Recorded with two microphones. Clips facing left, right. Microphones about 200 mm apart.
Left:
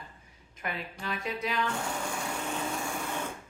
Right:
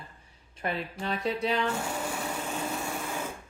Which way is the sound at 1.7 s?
5° right (ahead or behind).